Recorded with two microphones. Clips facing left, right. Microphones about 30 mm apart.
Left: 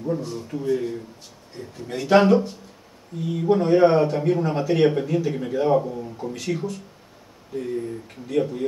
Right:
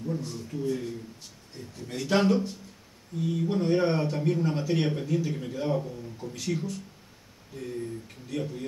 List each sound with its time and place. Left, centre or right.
0.2 s speech: centre
6.3 s speech: centre